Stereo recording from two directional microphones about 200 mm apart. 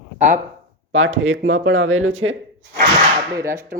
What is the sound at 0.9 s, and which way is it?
Speech, 75° right (ahead or behind).